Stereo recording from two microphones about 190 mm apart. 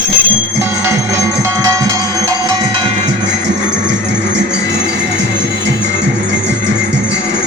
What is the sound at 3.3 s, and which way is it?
Music, 65° right (ahead or behind).